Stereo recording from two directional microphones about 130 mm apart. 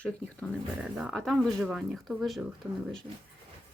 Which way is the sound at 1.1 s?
Centre (ahead or behind).